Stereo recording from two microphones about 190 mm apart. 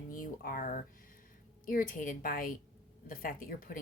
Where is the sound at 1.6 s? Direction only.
45° left (ahead or behind).